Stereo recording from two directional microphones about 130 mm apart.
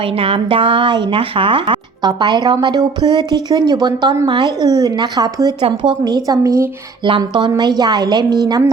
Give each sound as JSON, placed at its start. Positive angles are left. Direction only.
{"t": 0.2, "sound": "speech", "side_deg": -45}
{"t": 5.6, "sound": "speech", "side_deg": -40}
{"t": 6.2, "sound": "speech", "side_deg": -25}
{"t": 7.0, "sound": "speech", "side_deg": -40}